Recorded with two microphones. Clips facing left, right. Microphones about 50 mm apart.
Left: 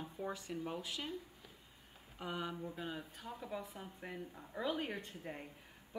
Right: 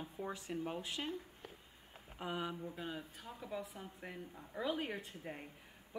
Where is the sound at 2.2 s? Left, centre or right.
Centre.